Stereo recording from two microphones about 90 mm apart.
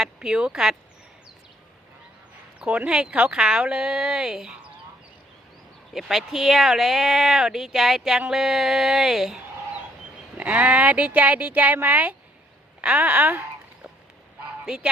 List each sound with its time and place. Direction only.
0.0 s speech: 10° right (ahead or behind)
2.6 s speech: 15° right (ahead or behind)
5.9 s speech: centre (ahead or behind)
10.3 s speech: 15° right (ahead or behind)
14.6 s speech: 10° right (ahead or behind)